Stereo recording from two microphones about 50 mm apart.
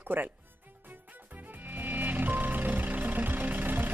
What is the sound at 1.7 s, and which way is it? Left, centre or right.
Vehicle, right.